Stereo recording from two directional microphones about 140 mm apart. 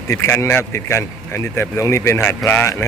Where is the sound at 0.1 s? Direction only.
20° left (ahead or behind).